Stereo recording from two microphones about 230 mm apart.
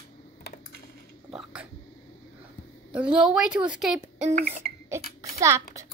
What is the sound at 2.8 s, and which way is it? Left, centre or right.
A woman's voice, centre.